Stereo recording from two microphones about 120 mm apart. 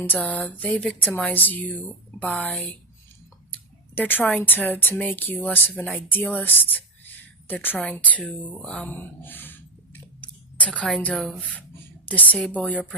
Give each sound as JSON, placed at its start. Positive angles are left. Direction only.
{"t": 0.0, "sound": "speech", "side_deg": 15}
{"t": 3.9, "sound": "speech", "side_deg": 15}